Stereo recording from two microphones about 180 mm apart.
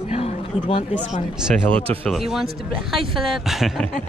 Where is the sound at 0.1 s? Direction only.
30° left (ahead or behind).